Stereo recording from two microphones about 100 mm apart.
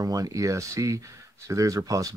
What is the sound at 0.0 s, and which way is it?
Speech, 35° right (ahead or behind).